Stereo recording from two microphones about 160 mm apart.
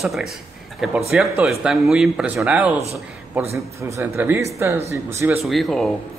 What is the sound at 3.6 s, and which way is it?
A man's voice, 20° right (ahead or behind).